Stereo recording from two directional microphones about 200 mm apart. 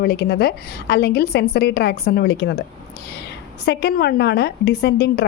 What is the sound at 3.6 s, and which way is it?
A woman's voice, 55° left (ahead or behind).